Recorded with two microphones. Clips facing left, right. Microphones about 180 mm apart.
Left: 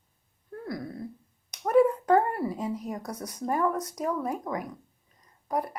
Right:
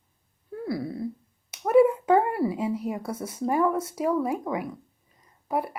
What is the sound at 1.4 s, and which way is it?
Speech, 5° right (ahead or behind).